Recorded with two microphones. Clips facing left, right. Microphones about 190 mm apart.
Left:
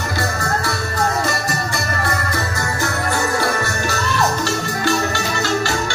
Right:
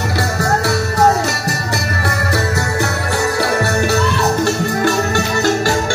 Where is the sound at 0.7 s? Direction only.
70° right (ahead or behind).